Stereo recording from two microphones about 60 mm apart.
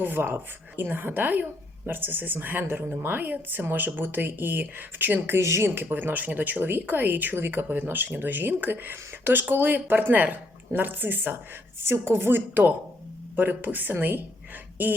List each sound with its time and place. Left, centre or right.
0.0 s speech: right
5.4 s speech: right
5.7 s speech: right